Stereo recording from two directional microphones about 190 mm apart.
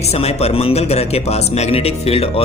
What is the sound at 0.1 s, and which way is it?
Speech, 35° left (ahead or behind).